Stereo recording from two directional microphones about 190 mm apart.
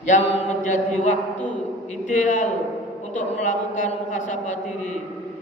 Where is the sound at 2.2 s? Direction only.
40° left (ahead or behind).